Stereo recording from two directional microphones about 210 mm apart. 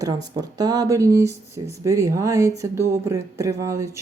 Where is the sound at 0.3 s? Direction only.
20° right (ahead or behind).